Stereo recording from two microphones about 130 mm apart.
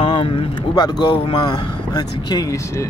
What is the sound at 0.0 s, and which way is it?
Speech, 40° left (ahead or behind).